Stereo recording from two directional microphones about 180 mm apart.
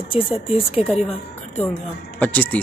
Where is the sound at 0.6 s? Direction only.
30° left (ahead or behind).